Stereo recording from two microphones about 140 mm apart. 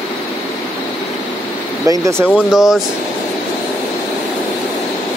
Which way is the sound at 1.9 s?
20° right (ahead or behind).